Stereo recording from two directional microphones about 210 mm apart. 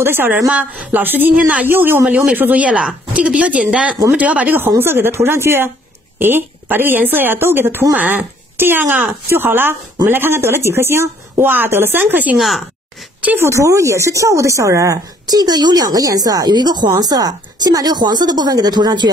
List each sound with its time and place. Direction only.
0.0 s speech: 10° right (ahead or behind)